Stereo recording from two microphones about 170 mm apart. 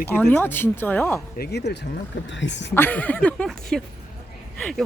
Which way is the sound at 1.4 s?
75° left (ahead or behind).